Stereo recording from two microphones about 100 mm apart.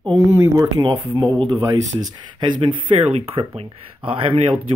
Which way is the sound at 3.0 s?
75° right (ahead or behind).